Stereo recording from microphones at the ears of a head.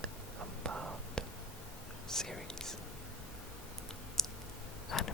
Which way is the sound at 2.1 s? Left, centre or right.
Centre.